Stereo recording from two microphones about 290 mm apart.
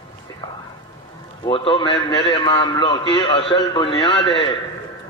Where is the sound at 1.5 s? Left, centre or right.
Centre.